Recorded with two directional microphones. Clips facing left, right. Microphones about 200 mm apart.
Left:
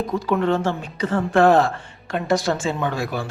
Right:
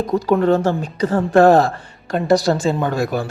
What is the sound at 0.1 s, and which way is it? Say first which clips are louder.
A woman's voice: right 6 dB; 40° right (ahead or behind).